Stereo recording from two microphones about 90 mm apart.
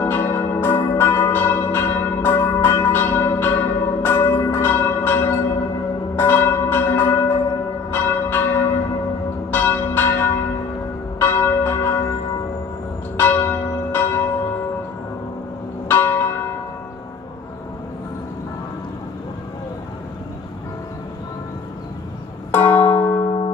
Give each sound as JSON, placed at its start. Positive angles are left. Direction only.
{"t": 0.0, "sound": "church bell", "side_deg": 25}
{"t": 13.2, "sound": "church bell", "side_deg": 20}
{"t": 15.9, "sound": "church bell", "side_deg": 25}
{"t": 22.5, "sound": "music", "side_deg": 20}